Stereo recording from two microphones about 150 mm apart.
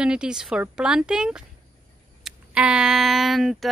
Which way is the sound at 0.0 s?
5° right (ahead or behind).